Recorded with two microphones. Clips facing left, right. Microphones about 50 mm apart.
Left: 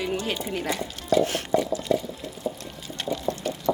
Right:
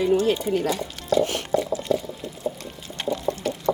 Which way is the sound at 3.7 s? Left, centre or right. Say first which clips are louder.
Right 1 dB; centre.